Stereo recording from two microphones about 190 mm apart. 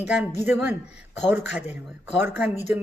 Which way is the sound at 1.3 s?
10° right (ahead or behind).